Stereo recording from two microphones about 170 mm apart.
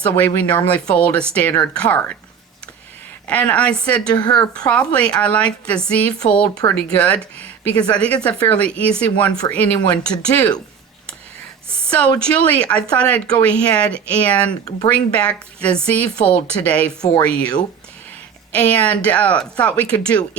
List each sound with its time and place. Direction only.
0.2 s speech: 10° left (ahead or behind)
3.2 s speech: 10° left (ahead or behind)
6.2 s speech: 40° left (ahead or behind)
6.7 s speech: 5° left (ahead or behind)
11.9 s a woman's voice: 10° left (ahead or behind)
18.5 s speech: 10° left (ahead or behind)